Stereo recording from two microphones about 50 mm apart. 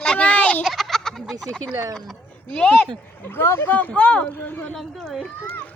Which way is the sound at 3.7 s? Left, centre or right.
Left.